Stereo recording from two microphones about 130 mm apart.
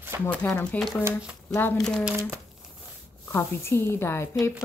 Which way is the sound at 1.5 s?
15° left (ahead or behind).